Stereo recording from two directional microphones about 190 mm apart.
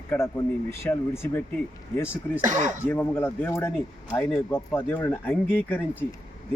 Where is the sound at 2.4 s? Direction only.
40° right (ahead or behind).